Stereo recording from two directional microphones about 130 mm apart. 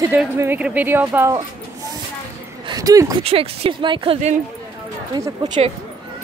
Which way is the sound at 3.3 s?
45° right (ahead or behind).